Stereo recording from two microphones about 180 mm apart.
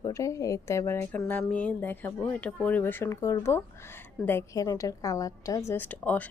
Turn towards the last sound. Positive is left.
turn(degrees=10)  # may be behind; listen again after turning